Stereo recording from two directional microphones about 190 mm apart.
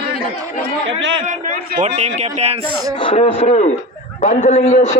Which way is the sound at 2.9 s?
25° left (ahead or behind).